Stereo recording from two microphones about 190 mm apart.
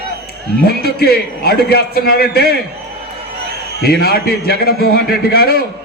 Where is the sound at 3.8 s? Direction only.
55° left (ahead or behind).